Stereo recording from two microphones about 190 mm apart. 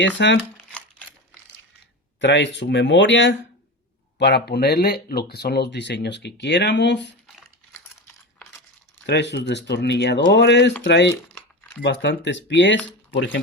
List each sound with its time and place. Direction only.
0.2 s speech: 65° left (ahead or behind)
0.5 s a sound: 5° left (ahead or behind)
2.2 s speech: 70° left (ahead or behind)
4.2 s speech: 60° left (ahead or behind)
9.0 s speech: 65° left (ahead or behind)